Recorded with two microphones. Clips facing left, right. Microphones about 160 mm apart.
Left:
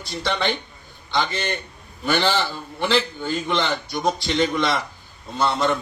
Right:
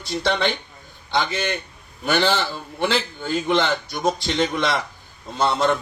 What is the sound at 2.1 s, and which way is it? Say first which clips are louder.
Speech: right 1 dB; 55° right (ahead or behind).